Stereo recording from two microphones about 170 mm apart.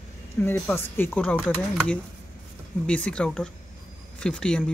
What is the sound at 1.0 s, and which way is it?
Speech, 10° left (ahead or behind).